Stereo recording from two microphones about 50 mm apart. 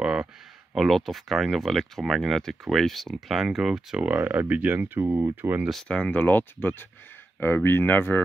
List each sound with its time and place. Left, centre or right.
0.0 s a sound: centre
0.7 s speech: centre
4.2 s speech: right
4.7 s speech: right
5.3 s speech: right
5.9 s speech: left
6.1 s speech: left